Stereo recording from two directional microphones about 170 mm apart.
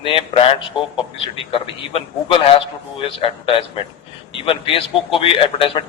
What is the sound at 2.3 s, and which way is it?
A man's voice, 30° left (ahead or behind).